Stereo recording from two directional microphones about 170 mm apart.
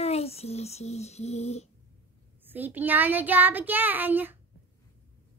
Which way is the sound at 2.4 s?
10° right (ahead or behind).